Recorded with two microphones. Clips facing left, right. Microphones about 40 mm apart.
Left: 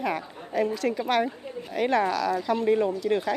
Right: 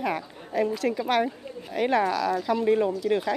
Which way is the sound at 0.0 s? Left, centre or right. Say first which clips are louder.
Even; centre.